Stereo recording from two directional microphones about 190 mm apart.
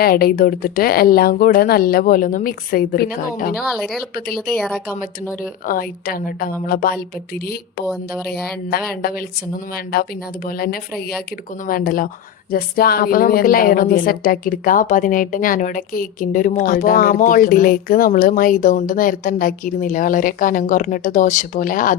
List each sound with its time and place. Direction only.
0.0 s a woman's voice: 50° left (ahead or behind)
3.7 s speech: centre (ahead or behind)
5.4 s a woman's voice: 50° left (ahead or behind)
8.7 s a woman's voice: 50° left (ahead or behind)